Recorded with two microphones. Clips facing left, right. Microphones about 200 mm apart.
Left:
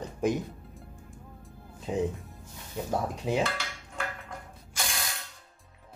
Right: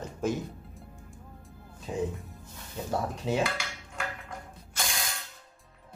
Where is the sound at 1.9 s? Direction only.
20° left (ahead or behind).